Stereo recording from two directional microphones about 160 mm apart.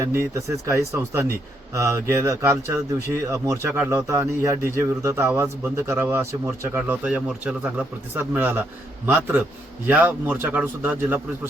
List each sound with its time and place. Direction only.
0.0 s a man's voice: 15° right (ahead or behind)